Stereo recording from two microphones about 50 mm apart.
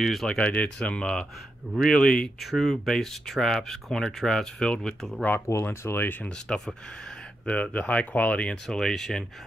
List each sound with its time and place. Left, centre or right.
0.0 s speech: centre
0.3 s speech: left
2.4 s speech: centre
5.5 s speech: left
6.5 s speech: centre
8.6 s speech: centre